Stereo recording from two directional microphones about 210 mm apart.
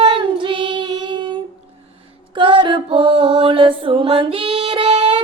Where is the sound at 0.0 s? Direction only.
25° right (ahead or behind).